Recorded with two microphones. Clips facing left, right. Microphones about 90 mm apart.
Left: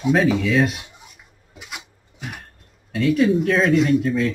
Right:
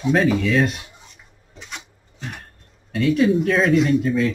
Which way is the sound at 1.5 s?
10° left (ahead or behind).